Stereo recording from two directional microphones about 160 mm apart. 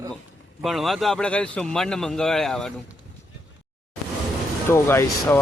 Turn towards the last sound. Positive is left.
turn(degrees=15)  # may be behind; listen again after turning